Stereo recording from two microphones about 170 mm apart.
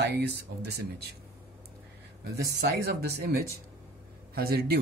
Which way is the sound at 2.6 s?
65° right (ahead or behind).